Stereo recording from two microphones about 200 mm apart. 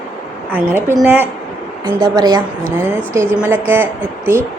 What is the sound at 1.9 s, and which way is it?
A woman's voice, 20° right (ahead or behind).